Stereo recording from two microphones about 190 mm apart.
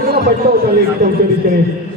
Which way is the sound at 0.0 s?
50° right (ahead or behind).